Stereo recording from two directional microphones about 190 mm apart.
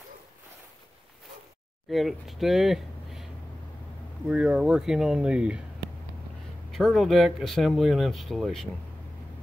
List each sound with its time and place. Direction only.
1.9 s speech: centre (ahead or behind)
4.3 s speech: 5° right (ahead or behind)
6.7 s speech: centre (ahead or behind)